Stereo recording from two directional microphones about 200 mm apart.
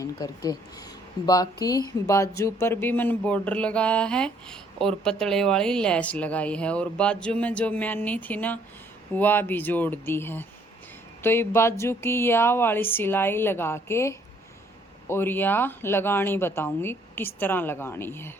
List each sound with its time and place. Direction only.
0.0 s speech: 20° left (ahead or behind)